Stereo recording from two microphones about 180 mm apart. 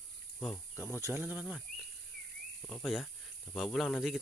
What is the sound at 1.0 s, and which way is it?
Speech, 10° right (ahead or behind).